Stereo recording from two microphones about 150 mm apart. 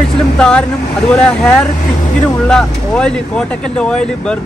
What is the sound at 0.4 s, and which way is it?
Speech, 5° left (ahead or behind).